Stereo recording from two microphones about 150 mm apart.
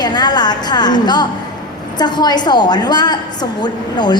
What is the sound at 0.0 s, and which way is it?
A woman's voice, 30° left (ahead or behind).